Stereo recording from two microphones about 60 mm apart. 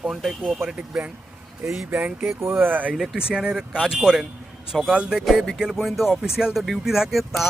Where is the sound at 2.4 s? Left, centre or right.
Right.